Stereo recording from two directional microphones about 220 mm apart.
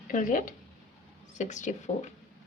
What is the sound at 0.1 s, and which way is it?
Speech, 35° left (ahead or behind).